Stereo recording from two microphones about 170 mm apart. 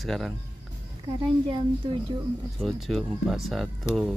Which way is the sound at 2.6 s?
Centre (ahead or behind).